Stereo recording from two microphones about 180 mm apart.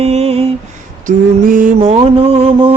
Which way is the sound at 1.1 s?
45° right (ahead or behind).